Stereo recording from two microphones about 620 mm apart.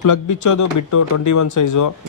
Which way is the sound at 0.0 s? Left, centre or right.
Left.